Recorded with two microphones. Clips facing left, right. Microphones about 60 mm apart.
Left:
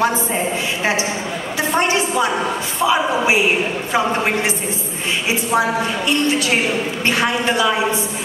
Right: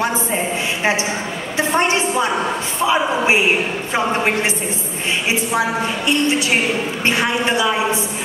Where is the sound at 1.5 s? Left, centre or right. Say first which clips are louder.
Right 1 dB; right.